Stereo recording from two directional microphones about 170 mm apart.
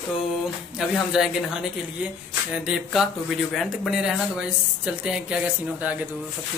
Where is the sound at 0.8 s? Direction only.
5° right (ahead or behind).